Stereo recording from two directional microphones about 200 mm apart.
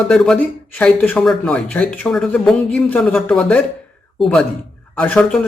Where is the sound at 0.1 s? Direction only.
5° left (ahead or behind).